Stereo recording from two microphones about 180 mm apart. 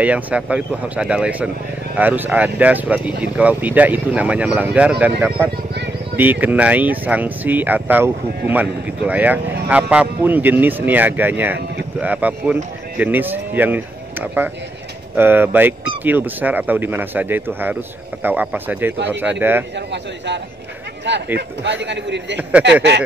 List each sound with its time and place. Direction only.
0.0 s speech: 5° right (ahead or behind)
21.1 s a man's voice: 80° right
22.4 s speech: 5° right (ahead or behind)